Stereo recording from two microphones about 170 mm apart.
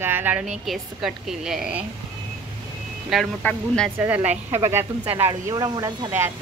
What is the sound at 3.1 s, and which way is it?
Speech, 5° left (ahead or behind).